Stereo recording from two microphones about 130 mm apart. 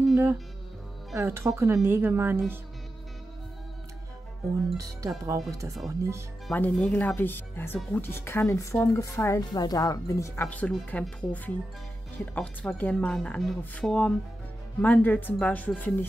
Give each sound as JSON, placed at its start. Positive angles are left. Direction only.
{"t": 1.1, "sound": "a woman's voice", "side_deg": -20}
{"t": 4.7, "sound": "a woman's voice", "side_deg": -25}
{"t": 6.5, "sound": "speech", "side_deg": 10}
{"t": 10.5, "sound": "speech", "side_deg": 10}